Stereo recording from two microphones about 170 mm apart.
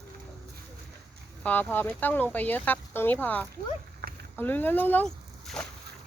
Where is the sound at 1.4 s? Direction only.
10° left (ahead or behind).